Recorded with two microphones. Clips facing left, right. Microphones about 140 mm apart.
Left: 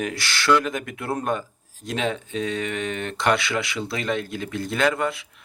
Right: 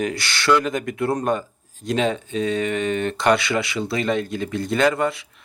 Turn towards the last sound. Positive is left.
turn(degrees=0)  # may be behind; listen again after turning